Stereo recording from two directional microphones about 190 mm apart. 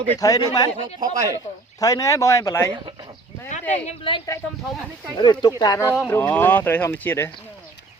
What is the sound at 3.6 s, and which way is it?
Speech, 10° left (ahead or behind).